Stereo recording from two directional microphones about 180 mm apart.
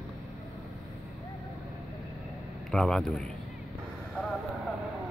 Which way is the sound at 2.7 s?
5° left (ahead or behind).